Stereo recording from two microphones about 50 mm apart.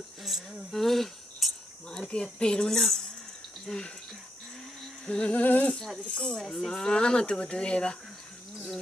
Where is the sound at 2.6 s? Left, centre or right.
Centre.